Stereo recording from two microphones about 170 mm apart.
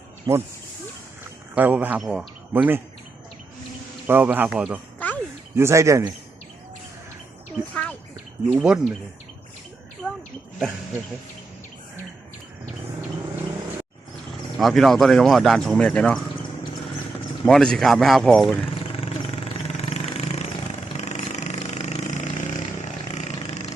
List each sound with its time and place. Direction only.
0.3 s speech: 20° right (ahead or behind)
1.2 s speech: 10° right (ahead or behind)
4.0 s speech: 10° right (ahead or behind)
4.9 s a sound: 10° left (ahead or behind)
5.5 s speech: 15° right (ahead or behind)
7.7 s a sound: 5° left (ahead or behind)
8.5 s speech: 5° right (ahead or behind)
14.6 s speech: centre (ahead or behind)
17.4 s speech: 5° left (ahead or behind)
18.7 s vehicle: 35° left (ahead or behind)